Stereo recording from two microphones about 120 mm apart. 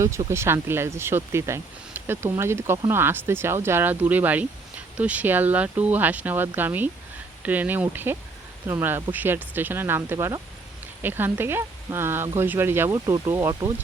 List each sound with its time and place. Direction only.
0.3 s speech: 20° right (ahead or behind)
12.9 s speech: 30° right (ahead or behind)
13.2 s speech: 20° right (ahead or behind)
13.5 s speech: 35° right (ahead or behind)